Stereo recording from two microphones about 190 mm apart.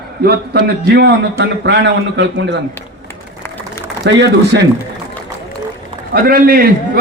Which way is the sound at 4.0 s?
60° right (ahead or behind).